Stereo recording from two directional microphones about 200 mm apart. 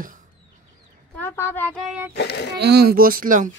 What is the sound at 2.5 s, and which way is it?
Speech, 55° right (ahead or behind).